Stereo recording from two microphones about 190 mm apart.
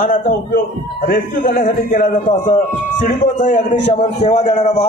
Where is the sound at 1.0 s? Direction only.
45° left (ahead or behind).